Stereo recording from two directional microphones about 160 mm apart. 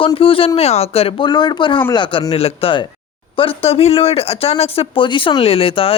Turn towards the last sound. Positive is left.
turn(degrees=35)  # may be behind; listen again after turning